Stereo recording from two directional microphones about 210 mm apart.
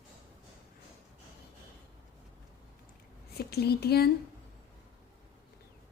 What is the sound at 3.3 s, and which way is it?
Speech, 50° left (ahead or behind).